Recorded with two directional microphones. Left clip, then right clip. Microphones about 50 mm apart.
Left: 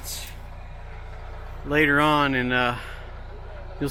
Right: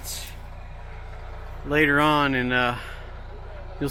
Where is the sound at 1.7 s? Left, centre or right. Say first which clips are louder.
Even; right.